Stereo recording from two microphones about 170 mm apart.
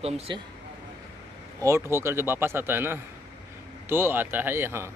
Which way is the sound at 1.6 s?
15° right (ahead or behind).